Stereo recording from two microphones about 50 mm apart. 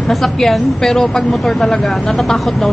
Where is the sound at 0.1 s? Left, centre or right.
Centre.